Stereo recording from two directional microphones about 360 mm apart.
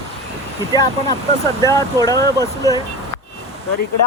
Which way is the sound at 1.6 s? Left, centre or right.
Centre.